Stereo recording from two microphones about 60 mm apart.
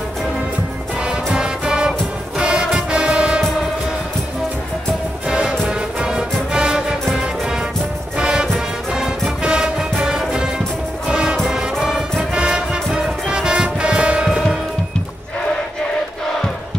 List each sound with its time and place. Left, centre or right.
1.0 s music: centre
5.3 s music: centre
8.2 s music: centre